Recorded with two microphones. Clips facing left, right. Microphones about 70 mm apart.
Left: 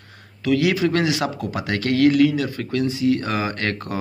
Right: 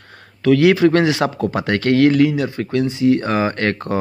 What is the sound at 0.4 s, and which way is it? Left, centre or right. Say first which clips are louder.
Speech: right 7 dB; right.